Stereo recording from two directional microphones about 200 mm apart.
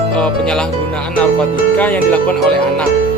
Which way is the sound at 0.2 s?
5° left (ahead or behind).